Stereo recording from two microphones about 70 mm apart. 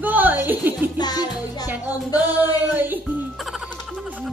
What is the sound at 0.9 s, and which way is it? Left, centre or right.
Music, left.